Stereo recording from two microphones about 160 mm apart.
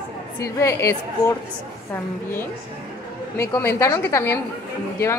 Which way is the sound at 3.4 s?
15° left (ahead or behind).